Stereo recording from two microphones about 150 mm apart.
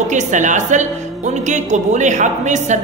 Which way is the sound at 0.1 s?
55° right (ahead or behind).